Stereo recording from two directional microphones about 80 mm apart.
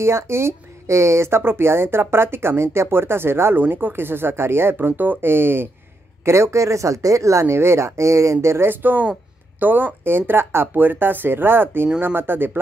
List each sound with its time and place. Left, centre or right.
0.0 s speech: right